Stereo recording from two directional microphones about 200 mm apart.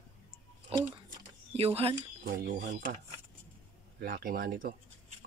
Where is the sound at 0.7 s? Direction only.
25° right (ahead or behind).